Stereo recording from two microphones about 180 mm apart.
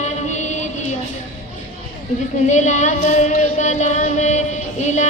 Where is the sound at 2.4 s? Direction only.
40° left (ahead or behind).